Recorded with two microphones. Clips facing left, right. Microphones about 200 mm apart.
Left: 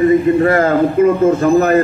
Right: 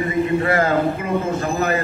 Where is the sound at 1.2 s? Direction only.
50° left (ahead or behind).